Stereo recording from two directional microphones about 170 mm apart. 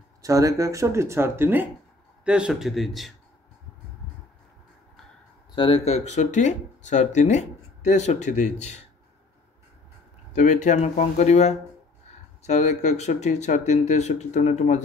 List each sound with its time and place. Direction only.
0.2 s a man's voice: 20° right (ahead or behind); by 3.1 s centre (ahead or behind)
5.5 s speech: 30° left (ahead or behind)
10.3 s speech: 45° left (ahead or behind)